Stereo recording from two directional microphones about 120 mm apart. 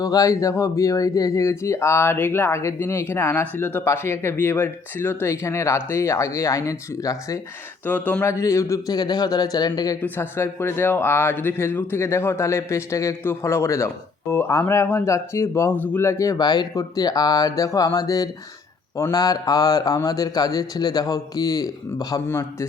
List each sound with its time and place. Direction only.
0.0 s speech: 30° left (ahead or behind)
7.9 s speech: 15° left (ahead or behind); by 10.0 s 30° left (ahead or behind)
10.0 s a man's voice: 20° left (ahead or behind)